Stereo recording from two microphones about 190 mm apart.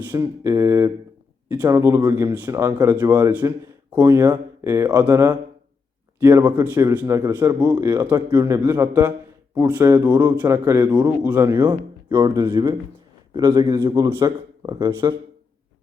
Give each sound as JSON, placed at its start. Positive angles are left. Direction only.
{"t": 0.1, "sound": "a man's voice", "side_deg": -15}
{"t": 7.9, "sound": "a man's voice", "side_deg": -10}
{"t": 8.1, "sound": "a man's voice", "side_deg": -20}
{"t": 11.6, "sound": "speech", "side_deg": -25}